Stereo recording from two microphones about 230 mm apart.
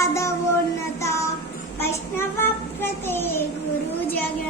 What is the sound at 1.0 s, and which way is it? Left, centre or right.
Music, centre.